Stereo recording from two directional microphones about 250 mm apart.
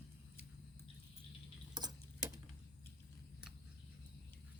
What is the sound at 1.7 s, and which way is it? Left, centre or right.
Tick-tock, centre.